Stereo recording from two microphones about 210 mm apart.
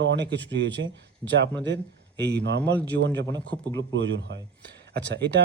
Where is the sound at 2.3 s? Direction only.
55° right (ahead or behind).